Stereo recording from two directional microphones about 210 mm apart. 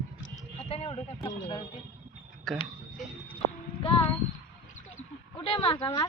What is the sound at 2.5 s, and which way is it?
Speech, centre (ahead or behind).